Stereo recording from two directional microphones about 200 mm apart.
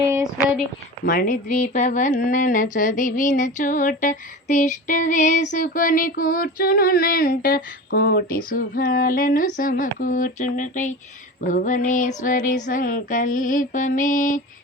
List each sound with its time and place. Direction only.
1.0 s speech: 45° left (ahead or behind)